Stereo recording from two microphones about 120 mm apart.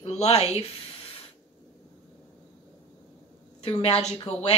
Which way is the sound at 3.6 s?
55° left (ahead or behind).